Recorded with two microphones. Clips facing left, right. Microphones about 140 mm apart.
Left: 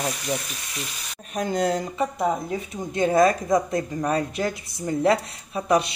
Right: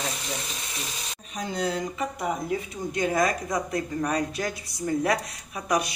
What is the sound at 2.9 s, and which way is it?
Speech, 25° left (ahead or behind).